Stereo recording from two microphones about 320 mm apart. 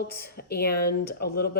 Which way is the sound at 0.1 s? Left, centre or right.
Left.